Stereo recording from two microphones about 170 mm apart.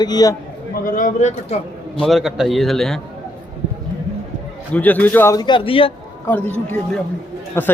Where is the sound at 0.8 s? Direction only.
50° left (ahead or behind).